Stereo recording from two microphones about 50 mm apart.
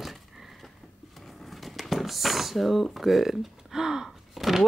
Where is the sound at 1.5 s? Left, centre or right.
Centre.